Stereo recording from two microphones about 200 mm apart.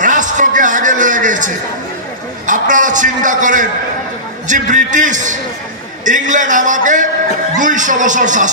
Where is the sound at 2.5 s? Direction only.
40° right (ahead or behind).